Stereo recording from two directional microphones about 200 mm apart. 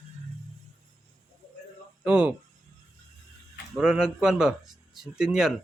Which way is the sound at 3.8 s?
5° right (ahead or behind).